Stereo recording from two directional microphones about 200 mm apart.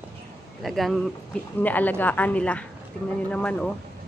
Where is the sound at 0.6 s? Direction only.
Centre (ahead or behind).